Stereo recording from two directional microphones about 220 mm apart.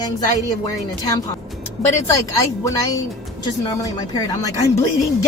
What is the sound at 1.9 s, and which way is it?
A woman's voice, 10° left (ahead or behind).